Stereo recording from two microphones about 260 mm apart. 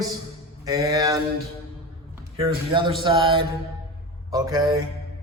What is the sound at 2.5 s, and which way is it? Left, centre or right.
A man's voice, centre.